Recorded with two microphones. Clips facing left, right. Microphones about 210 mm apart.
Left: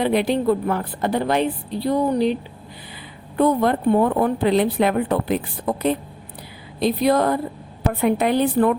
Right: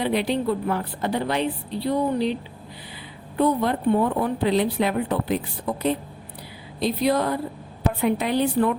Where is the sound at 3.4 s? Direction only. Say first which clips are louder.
Left 3 dB; 50° left (ahead or behind).